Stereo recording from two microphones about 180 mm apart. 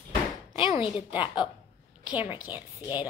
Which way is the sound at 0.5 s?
30° left (ahead or behind).